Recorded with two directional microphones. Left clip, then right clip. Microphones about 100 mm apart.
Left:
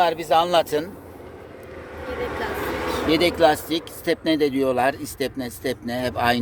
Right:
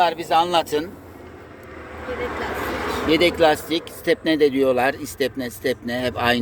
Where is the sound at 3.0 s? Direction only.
40° left (ahead or behind).